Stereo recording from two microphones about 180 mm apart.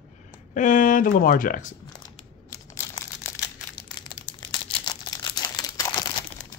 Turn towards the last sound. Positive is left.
turn(degrees=20)  # may be behind; listen again after turning